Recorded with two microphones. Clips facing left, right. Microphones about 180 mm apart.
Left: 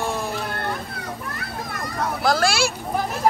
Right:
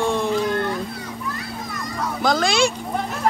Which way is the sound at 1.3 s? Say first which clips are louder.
Even; 60° left (ahead or behind).